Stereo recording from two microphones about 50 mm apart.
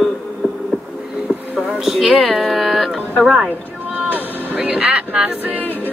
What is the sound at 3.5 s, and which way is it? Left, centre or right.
Music, right.